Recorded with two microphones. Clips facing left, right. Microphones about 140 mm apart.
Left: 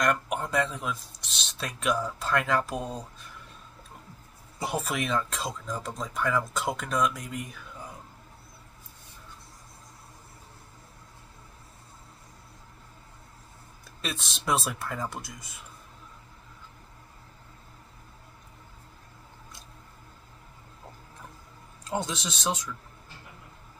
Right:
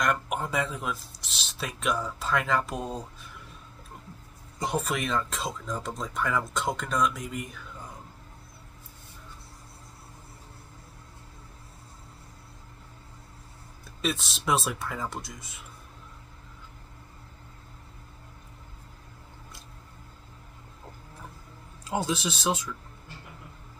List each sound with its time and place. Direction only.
0.0 s speech: centre (ahead or behind)
4.6 s speech: 5° left (ahead or behind)
14.0 s speech: centre (ahead or behind)
21.8 s speech: 5° right (ahead or behind)